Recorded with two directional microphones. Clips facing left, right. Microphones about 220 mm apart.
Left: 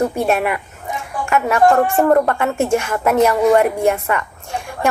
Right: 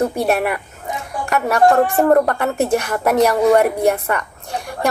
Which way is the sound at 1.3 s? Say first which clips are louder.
Even; 35° right (ahead or behind).